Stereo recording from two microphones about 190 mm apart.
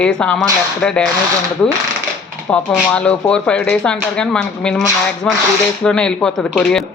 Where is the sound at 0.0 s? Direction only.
5° left (ahead or behind).